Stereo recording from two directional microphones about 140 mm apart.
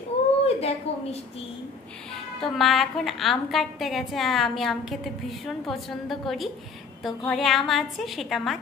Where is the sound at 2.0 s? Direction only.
Centre (ahead or behind).